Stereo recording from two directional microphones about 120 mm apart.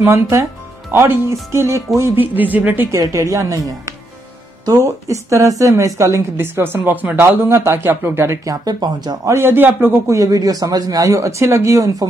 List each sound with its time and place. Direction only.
0.0 s a woman's voice: 20° right (ahead or behind)
3.0 s a woman's voice: 25° right (ahead or behind)
8.6 s a woman's voice: 35° right (ahead or behind)